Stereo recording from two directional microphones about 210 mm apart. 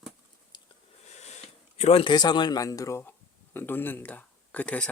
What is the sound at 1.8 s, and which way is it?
Speech, 30° left (ahead or behind).